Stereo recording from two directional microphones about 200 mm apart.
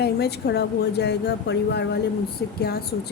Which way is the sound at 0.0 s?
55° left (ahead or behind).